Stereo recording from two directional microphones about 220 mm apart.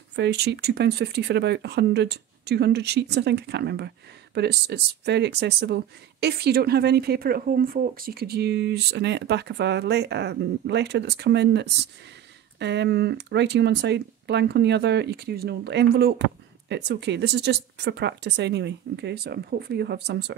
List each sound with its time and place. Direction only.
0.1 s speech: 50° right (ahead or behind)